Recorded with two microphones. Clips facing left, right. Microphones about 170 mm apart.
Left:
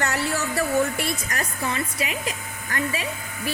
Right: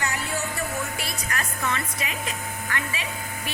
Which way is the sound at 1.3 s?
35° left (ahead or behind).